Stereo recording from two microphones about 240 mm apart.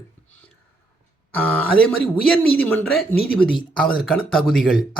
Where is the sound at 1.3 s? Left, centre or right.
Centre.